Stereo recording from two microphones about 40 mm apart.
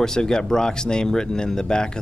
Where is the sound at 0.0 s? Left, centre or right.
Centre.